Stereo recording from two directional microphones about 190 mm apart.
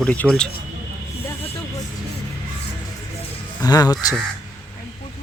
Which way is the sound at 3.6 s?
20° left (ahead or behind).